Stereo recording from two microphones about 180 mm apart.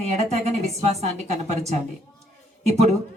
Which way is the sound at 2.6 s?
35° right (ahead or behind).